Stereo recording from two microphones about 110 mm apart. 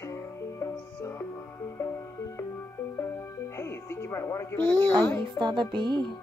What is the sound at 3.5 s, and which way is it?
Music, 25° left (ahead or behind).